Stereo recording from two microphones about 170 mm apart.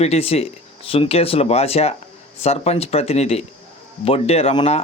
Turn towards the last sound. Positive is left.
turn(degrees=35)  # may be behind; listen again after turning